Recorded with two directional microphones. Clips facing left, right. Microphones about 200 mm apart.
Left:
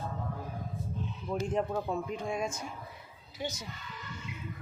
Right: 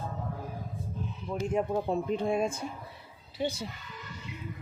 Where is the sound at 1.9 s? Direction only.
30° right (ahead or behind).